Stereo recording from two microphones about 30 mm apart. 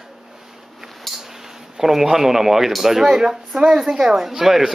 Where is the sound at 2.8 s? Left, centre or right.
Centre.